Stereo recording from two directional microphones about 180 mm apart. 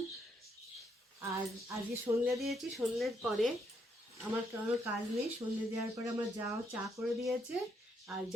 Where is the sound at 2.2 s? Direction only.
Centre (ahead or behind).